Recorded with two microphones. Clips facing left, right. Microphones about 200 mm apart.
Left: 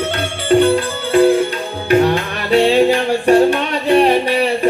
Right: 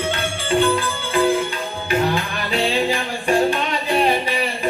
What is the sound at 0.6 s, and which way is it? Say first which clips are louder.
Music: left 5 dB; 40° left (ahead or behind).